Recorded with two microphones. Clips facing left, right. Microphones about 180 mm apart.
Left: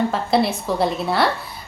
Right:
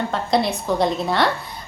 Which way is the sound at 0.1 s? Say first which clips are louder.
Left 1 dB; 5° left (ahead or behind).